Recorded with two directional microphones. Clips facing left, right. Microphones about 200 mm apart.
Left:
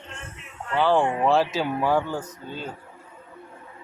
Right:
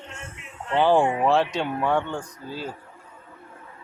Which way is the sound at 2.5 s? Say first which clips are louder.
Right 3 dB; 5° right (ahead or behind).